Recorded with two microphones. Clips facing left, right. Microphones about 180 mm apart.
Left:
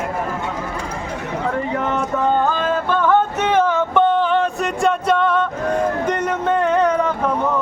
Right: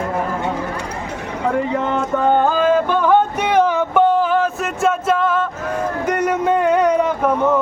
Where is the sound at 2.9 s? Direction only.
10° right (ahead or behind).